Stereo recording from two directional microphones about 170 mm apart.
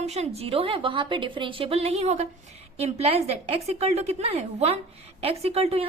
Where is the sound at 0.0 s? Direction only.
40° right (ahead or behind).